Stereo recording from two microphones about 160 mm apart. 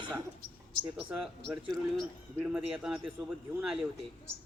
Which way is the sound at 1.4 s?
Centre (ahead or behind).